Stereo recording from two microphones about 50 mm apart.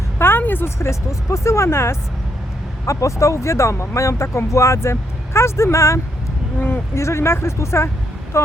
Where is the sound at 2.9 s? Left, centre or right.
Left.